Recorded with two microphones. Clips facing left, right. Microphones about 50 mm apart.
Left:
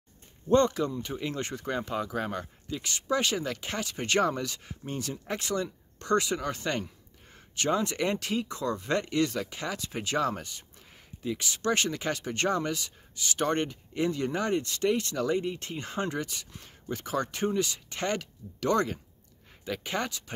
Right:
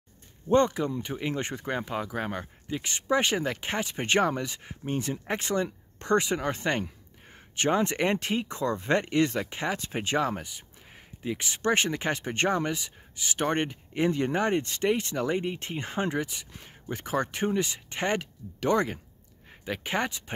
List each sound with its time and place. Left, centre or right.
0.5 s speech: centre
10.3 s speech: centre
11.2 s speech: right